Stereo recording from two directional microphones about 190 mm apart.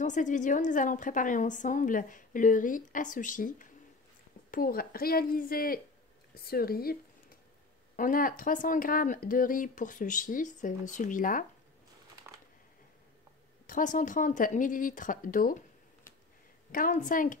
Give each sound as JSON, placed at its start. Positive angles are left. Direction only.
{"t": 0.0, "sound": "a woman's voice", "side_deg": 40}
{"t": 12.2, "sound": "a sound", "side_deg": -15}
{"t": 13.7, "sound": "a woman's voice", "side_deg": 45}
{"t": 16.7, "sound": "a woman's voice", "side_deg": 45}